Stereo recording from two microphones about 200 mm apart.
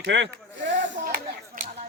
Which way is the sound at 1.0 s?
45° right (ahead or behind).